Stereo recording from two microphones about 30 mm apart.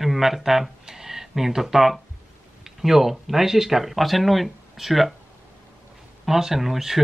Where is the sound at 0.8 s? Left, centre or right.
Centre.